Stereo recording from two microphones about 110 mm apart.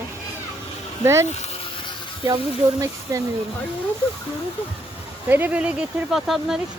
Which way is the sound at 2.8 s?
30° right (ahead or behind).